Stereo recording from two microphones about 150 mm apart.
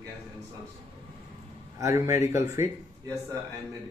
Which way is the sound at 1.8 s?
20° right (ahead or behind).